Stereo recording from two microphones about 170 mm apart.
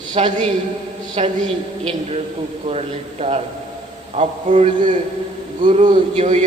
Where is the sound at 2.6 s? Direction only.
40° right (ahead or behind).